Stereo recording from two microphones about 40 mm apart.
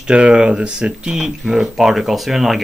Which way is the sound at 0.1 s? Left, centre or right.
Right.